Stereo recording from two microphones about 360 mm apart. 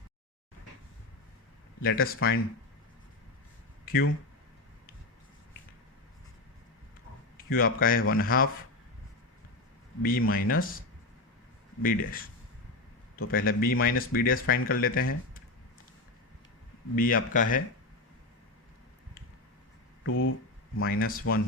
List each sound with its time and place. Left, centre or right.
1.8 s speech: left
7.3 s a man's voice: left
10.0 s speech: left
17.0 s speech: left
20.1 s speech: left
20.7 s speech: left